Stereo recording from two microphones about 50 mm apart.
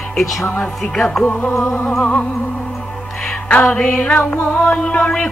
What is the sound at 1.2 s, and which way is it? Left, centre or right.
Music, left.